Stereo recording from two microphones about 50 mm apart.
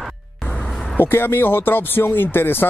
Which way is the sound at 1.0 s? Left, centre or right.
Left.